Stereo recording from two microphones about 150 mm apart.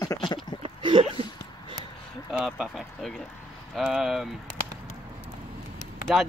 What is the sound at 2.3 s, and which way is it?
Speech, 5° right (ahead or behind).